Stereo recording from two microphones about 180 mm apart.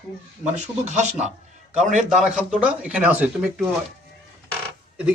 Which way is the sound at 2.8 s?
10° right (ahead or behind).